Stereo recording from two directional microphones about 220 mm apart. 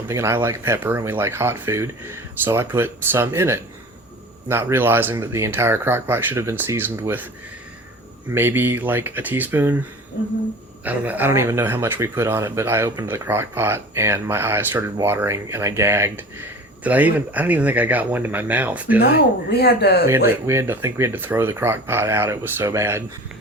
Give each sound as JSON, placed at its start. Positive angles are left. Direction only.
{"t": 0.1, "sound": "speech", "side_deg": -10}
{"t": 8.3, "sound": "speech", "side_deg": -10}
{"t": 10.8, "sound": "speech", "side_deg": -5}
{"t": 19.5, "sound": "speech", "side_deg": 45}
{"t": 20.1, "sound": "speech", "side_deg": -10}